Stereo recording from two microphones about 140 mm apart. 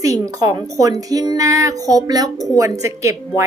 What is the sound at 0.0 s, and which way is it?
A woman's voice, 25° right (ahead or behind).